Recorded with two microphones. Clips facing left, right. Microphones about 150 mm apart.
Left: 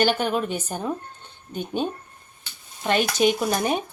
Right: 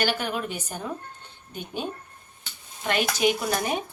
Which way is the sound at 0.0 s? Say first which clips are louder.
Left 5 dB; 25° left (ahead or behind).